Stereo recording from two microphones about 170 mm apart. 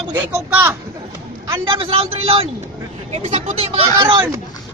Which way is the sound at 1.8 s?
35° right (ahead or behind).